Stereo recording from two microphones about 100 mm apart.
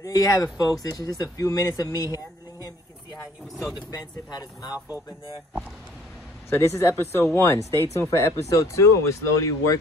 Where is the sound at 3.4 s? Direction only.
Centre (ahead or behind).